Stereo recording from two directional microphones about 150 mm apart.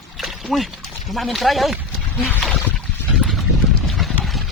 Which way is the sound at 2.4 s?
5° left (ahead or behind).